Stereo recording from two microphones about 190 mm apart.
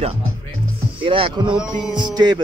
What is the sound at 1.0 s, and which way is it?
Music, 25° right (ahead or behind).